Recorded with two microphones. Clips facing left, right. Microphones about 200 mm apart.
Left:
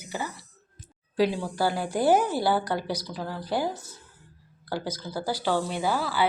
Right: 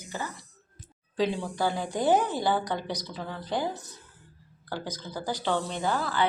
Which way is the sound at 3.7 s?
20° right (ahead or behind).